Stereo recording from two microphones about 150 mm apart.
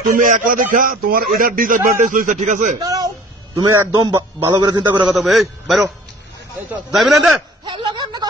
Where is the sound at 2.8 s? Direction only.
25° right (ahead or behind).